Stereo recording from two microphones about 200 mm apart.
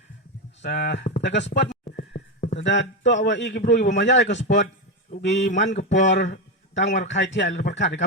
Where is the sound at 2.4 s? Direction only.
35° left (ahead or behind).